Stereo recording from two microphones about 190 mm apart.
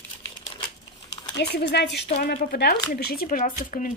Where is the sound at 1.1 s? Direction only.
65° left (ahead or behind).